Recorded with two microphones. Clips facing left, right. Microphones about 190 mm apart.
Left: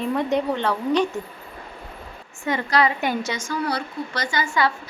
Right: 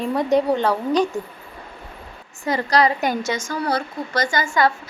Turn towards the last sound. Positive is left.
turn(degrees=-45)  # may be behind; listen again after turning